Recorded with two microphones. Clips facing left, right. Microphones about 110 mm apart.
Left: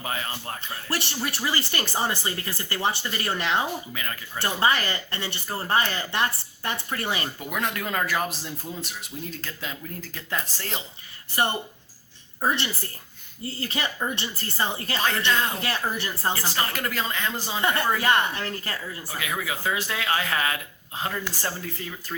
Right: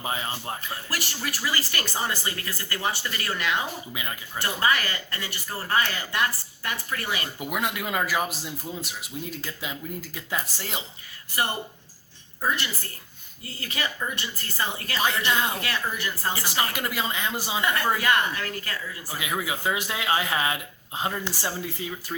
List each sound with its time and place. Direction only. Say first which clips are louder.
0.0 s speech: right 1 dB; 20° right (ahead or behind)
0.6 s speech: left 2 dB; 25° left (ahead or behind)
7.3 s a man's voice: even; 10° right (ahead or behind)
12.4 s a woman's voice: left 2 dB; 25° left (ahead or behind)
15.3 s a man's voice: left 2 dB; 15° right (ahead or behind)
15.6 s speech: left 1 dB; 30° left (ahead or behind)
16.3 s a man's voice: even; 15° right (ahead or behind)
17.6 s speech: left 1 dB; 30° left (ahead or behind)
19.1 s speech: right 1 dB; 20° right (ahead or behind)